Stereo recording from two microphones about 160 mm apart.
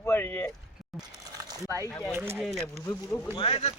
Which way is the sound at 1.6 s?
20° right (ahead or behind).